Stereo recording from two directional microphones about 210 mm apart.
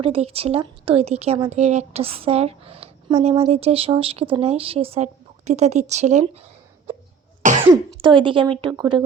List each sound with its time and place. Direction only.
0.0 s speech: 30° right (ahead or behind)